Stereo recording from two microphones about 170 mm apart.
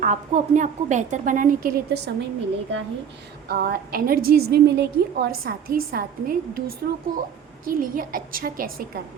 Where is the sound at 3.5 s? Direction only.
60° right (ahead or behind).